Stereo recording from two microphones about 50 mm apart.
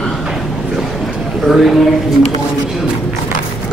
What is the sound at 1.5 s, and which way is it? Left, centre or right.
Speech, centre.